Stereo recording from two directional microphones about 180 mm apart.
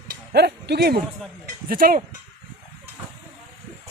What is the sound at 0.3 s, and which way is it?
Speech, 65° right (ahead or behind).